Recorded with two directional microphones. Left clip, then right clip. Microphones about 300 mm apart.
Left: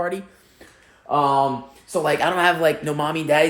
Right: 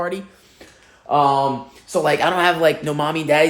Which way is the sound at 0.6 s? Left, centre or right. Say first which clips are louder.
Right 3 dB; centre.